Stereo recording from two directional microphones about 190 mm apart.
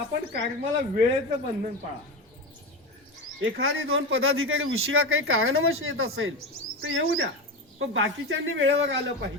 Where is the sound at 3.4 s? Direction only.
80° right.